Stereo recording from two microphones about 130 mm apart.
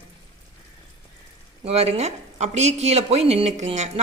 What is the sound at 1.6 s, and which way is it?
Speech, 50° right (ahead or behind).